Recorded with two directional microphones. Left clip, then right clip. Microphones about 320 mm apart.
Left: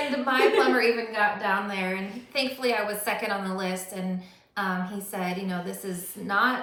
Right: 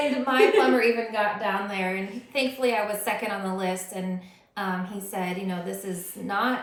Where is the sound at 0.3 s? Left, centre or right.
Centre.